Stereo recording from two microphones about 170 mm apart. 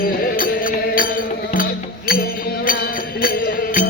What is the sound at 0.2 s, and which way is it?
Music, 55° left (ahead or behind).